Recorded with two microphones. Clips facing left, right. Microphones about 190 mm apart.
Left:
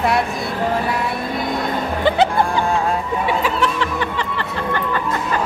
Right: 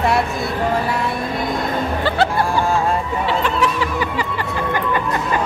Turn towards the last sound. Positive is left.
turn(degrees=5)  # may be behind; listen again after turning